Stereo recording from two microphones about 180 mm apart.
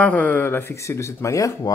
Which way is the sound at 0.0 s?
10° left (ahead or behind).